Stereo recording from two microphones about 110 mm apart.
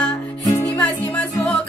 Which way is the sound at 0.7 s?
15° left (ahead or behind).